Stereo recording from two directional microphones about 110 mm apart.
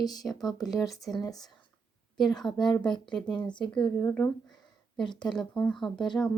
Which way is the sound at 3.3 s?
45° left (ahead or behind).